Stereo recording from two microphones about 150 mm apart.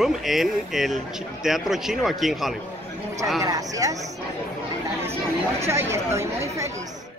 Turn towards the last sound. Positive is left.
turn(degrees=-20)  # may be behind; listen again after turning